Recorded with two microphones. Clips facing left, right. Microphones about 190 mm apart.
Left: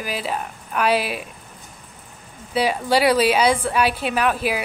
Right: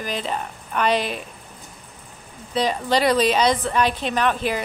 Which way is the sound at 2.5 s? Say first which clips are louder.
Left 2 dB; 10° left (ahead or behind).